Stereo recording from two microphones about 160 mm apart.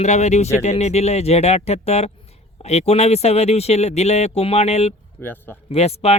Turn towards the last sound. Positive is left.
turn(degrees=40)  # may be behind; listen again after turning